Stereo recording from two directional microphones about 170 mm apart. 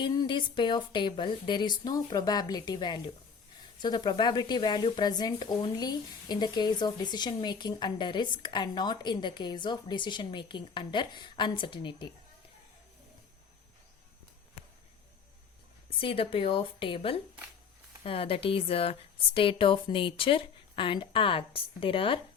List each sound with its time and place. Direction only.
0.0 s speech: 25° left (ahead or behind)
16.0 s speech: 30° left (ahead or behind)